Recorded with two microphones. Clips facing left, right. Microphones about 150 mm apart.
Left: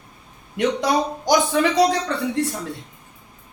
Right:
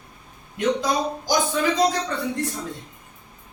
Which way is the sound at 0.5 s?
70° left (ahead or behind).